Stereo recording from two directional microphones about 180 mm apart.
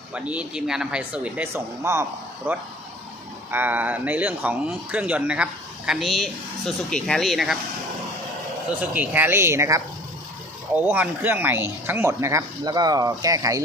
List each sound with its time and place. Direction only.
0.1 s speech: 5° right (ahead or behind)
8.8 s speech: 10° right (ahead or behind)
10.8 s speech: 10° right (ahead or behind)